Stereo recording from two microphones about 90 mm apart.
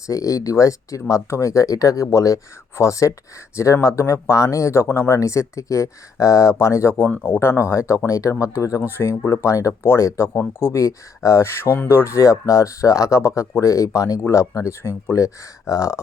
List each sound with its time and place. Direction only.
0.1 s speech: 40° left (ahead or behind)
7.0 s speech: 20° left (ahead or behind)